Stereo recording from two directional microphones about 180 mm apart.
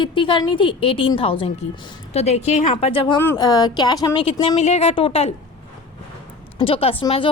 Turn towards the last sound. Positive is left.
turn(degrees=30)  # may be behind; listen again after turning